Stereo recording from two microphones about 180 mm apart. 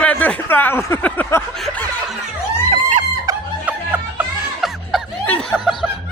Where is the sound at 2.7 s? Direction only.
45° right (ahead or behind).